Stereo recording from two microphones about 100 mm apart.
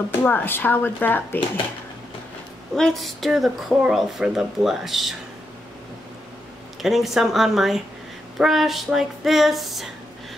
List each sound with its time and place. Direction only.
0.2 s speech: 20° left (ahead or behind)
2.7 s speech: centre (ahead or behind)
6.8 s speech: centre (ahead or behind)